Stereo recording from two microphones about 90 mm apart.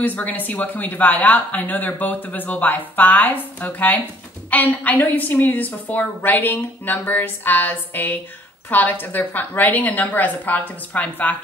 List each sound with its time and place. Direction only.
0.0 s a woman's voice: 20° left (ahead or behind)